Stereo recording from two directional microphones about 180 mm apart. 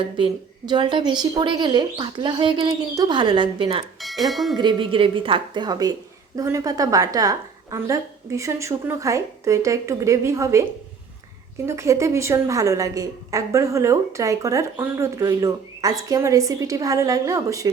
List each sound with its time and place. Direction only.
0.2 s speech: 25° right (ahead or behind)
4.0 s speech: centre (ahead or behind)
4.5 s a woman's voice: 25° right (ahead or behind)